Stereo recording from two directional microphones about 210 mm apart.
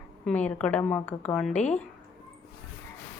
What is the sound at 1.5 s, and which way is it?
Speech, 35° left (ahead or behind).